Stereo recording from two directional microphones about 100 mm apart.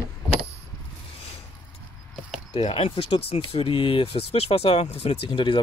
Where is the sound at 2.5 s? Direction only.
70° left (ahead or behind).